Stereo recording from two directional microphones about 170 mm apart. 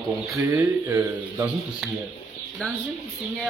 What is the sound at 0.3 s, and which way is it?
Speech, 10° right (ahead or behind).